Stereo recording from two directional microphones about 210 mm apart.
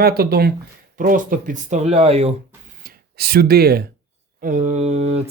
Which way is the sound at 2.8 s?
45° right (ahead or behind).